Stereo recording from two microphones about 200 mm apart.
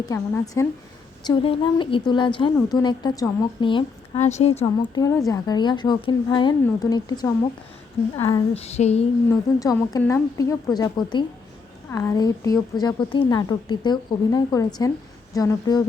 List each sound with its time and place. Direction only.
0.0 s a woman's voice: 15° left (ahead or behind); by 9.0 s 30° left (ahead or behind)
9.3 s a woman's voice: 15° left (ahead or behind)